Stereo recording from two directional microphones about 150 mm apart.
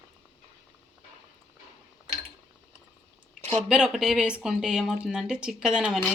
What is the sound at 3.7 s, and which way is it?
Speech, 5° right (ahead or behind).